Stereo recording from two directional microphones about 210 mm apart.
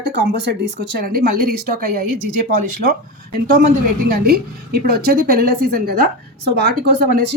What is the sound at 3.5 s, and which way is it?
A woman's voice, 40° right (ahead or behind).